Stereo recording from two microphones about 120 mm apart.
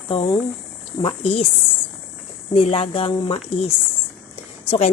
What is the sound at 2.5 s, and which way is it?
Speech, 50° left (ahead or behind).